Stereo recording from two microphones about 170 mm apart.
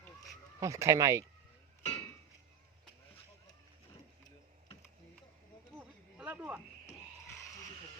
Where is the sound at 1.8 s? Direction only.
40° left (ahead or behind).